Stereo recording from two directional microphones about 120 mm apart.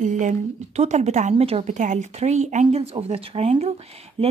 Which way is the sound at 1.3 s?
55° right (ahead or behind).